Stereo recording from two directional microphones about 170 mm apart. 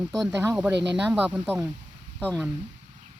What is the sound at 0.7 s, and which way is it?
Speech, 90° right.